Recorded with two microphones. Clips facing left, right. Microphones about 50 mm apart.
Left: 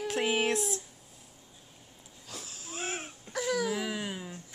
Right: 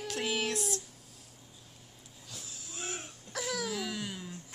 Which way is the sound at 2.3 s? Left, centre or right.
Left.